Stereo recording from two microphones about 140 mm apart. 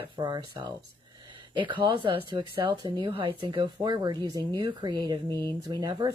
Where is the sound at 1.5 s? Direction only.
35° right (ahead or behind).